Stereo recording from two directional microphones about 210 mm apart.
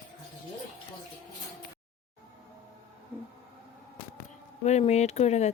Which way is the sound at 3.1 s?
10° right (ahead or behind).